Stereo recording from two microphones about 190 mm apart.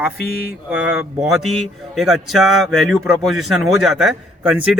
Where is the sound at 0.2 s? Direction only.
55° left (ahead or behind).